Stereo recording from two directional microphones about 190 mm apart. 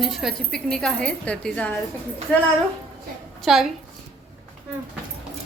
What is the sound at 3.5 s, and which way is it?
Speech, centre (ahead or behind).